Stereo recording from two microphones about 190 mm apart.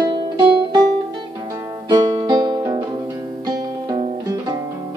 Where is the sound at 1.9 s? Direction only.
20° right (ahead or behind).